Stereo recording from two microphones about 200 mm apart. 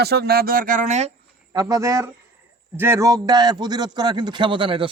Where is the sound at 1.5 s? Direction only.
15° right (ahead or behind).